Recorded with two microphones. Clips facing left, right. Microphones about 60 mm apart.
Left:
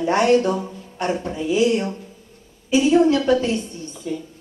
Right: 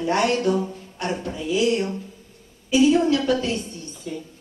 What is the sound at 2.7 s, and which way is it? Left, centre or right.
Speech, left.